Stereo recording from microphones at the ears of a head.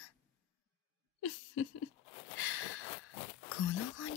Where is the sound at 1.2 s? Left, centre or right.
Left.